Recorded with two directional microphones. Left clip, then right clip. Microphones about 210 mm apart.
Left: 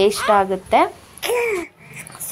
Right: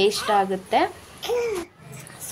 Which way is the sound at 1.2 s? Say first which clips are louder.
Left 5 dB; 30° left (ahead or behind).